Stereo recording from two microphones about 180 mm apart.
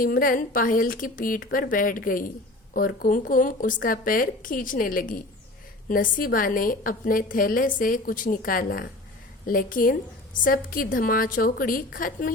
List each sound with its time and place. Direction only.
0.0 s a woman's voice: 50° left (ahead or behind)